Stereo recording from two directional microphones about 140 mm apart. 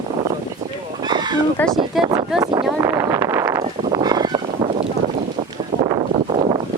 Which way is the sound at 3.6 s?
50° right (ahead or behind).